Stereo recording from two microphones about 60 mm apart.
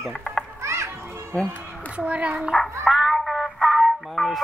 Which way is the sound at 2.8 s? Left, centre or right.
Centre.